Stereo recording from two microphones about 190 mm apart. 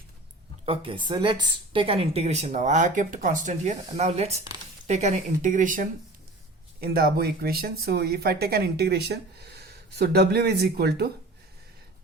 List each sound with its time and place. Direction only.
0.6 s speech: 30° right (ahead or behind)
6.8 s speech: 55° right (ahead or behind)